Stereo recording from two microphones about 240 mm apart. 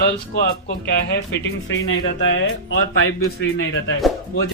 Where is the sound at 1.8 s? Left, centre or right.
Left.